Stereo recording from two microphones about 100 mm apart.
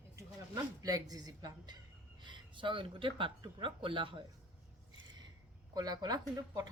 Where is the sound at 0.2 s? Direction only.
35° right (ahead or behind); by 4.2 s 55° right (ahead or behind).